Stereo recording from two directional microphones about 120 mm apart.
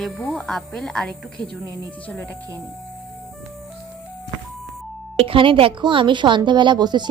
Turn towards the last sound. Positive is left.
turn(degrees=-35)  # may be behind; listen again after turning